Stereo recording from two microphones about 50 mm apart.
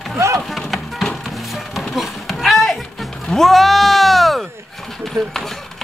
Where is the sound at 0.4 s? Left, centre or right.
Centre.